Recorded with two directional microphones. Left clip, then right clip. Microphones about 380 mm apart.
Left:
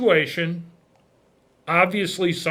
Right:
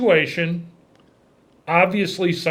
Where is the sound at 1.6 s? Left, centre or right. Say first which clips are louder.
Right 2 dB; left.